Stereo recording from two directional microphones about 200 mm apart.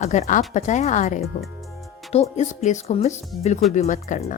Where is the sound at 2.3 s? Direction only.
35° left (ahead or behind).